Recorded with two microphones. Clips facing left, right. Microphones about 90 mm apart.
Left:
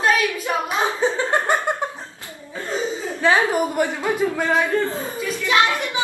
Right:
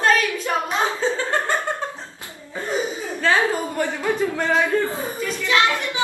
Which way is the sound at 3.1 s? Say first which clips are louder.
Left 2 dB; 20° left (ahead or behind).